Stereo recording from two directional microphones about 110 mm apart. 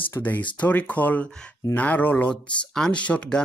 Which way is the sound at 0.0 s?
15° left (ahead or behind).